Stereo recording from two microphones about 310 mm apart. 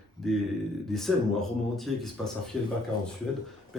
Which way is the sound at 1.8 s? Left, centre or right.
Centre.